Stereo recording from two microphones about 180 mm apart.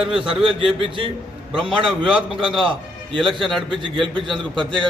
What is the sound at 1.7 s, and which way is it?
Speech, 30° right (ahead or behind).